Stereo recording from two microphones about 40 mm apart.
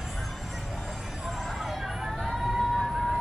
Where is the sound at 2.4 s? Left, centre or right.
Centre.